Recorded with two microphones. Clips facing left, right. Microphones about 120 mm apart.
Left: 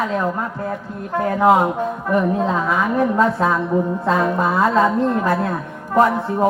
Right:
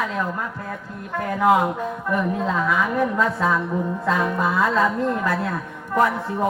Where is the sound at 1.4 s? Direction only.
35° left (ahead or behind).